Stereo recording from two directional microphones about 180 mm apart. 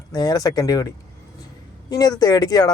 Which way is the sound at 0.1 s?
20° left (ahead or behind).